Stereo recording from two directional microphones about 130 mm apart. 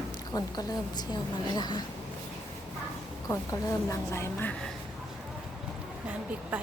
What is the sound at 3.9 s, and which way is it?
Speech, 20° left (ahead or behind).